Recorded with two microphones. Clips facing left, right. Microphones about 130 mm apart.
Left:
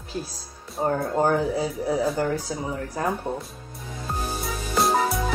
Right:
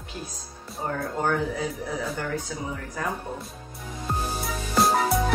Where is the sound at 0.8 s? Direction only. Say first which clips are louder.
Left 5 dB; 30° left (ahead or behind).